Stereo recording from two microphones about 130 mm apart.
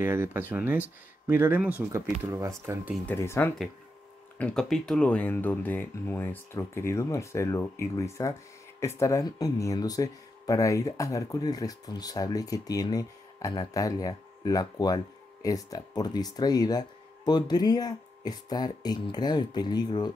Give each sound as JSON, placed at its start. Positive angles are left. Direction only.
{"t": 0.0, "sound": "speech", "side_deg": -20}
{"t": 2.2, "sound": "speech", "side_deg": -25}
{"t": 3.1, "sound": "speech", "side_deg": 15}
{"t": 4.4, "sound": "speech", "side_deg": 5}